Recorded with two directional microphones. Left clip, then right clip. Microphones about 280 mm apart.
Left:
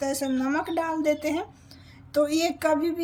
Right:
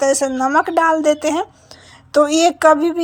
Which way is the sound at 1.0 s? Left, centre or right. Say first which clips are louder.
Right 9 dB; centre.